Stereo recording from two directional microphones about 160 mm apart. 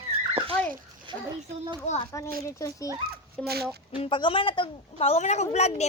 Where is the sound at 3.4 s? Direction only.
80° right.